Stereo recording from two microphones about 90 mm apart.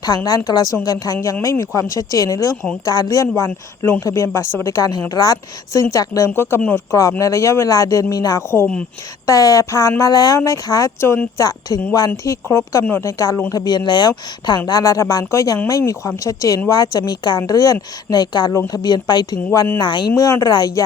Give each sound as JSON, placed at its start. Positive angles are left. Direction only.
{"t": 0.0, "sound": "a woman's voice", "side_deg": 45}
{"t": 0.9, "sound": "a woman's voice", "side_deg": 40}
{"t": 8.4, "sound": "speech", "side_deg": 25}
{"t": 9.2, "sound": "a woman's voice", "side_deg": 40}
{"t": 11.3, "sound": "a woman's voice", "side_deg": 45}
{"t": 14.7, "sound": "a woman's voice", "side_deg": 40}
{"t": 19.8, "sound": "speech", "side_deg": 65}
{"t": 20.1, "sound": "a woman's voice", "side_deg": 40}